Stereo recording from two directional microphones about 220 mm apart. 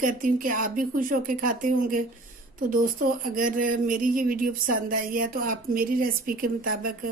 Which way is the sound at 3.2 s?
40° right (ahead or behind).